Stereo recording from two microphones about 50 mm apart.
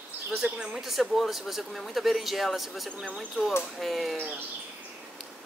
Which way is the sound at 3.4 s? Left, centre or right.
Left.